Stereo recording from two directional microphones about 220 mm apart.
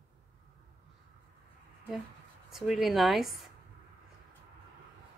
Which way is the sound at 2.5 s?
Centre (ahead or behind).